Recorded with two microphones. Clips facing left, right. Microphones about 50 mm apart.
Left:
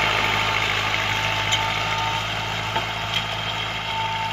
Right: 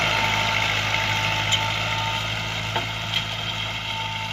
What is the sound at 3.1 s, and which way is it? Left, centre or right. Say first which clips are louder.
Vehicle: left 2 dB; centre.